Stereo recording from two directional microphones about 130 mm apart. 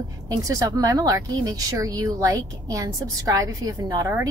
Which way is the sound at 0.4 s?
25° right (ahead or behind).